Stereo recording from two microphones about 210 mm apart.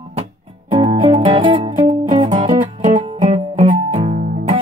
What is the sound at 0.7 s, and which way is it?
Music, 20° right (ahead or behind).